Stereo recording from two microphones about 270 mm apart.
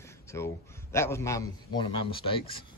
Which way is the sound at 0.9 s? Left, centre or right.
Centre.